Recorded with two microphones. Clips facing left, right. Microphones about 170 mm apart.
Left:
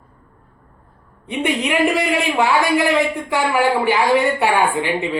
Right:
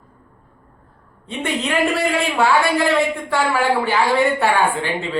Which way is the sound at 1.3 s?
15° left (ahead or behind).